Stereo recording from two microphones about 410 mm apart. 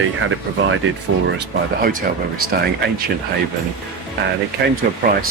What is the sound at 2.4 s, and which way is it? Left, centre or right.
Speech, right.